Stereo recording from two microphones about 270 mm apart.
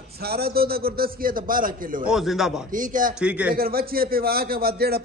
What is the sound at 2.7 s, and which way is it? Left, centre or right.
Speech, right.